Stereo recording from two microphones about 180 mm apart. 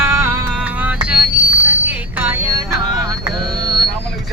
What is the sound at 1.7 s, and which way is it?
Bicycle bell, 10° right (ahead or behind).